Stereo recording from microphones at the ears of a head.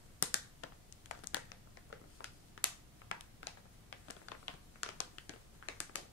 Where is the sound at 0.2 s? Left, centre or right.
Left.